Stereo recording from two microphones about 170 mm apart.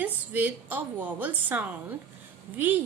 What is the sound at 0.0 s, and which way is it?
A woman's voice, 10° right (ahead or behind).